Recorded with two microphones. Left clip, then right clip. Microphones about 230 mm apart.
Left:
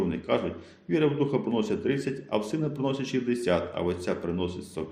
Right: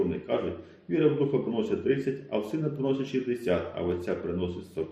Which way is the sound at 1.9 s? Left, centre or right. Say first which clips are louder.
Right 1 dB; left.